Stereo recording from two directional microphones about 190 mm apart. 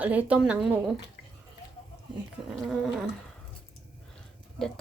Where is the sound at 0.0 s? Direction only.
10° right (ahead or behind).